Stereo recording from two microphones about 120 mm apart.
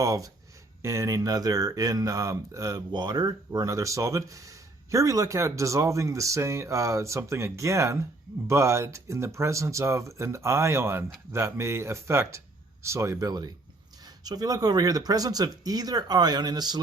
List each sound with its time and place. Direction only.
0.0 s speech: 25° right (ahead or behind)